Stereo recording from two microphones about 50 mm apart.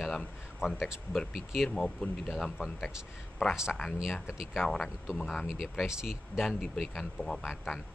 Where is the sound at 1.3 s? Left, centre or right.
Centre.